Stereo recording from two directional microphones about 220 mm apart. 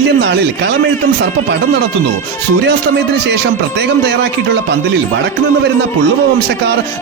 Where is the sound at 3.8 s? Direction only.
50° right (ahead or behind).